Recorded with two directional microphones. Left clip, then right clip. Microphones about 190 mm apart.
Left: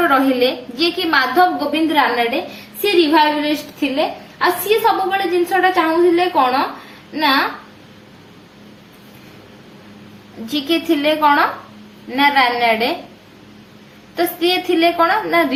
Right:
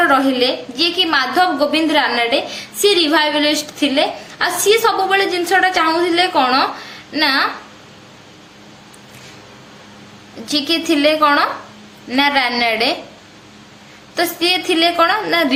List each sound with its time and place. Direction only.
0.1 s a woman's voice: 10° right (ahead or behind); by 7.4 s 35° right (ahead or behind)
10.5 s a woman's voice: 20° right (ahead or behind)
14.2 s a woman's voice: 20° right (ahead or behind)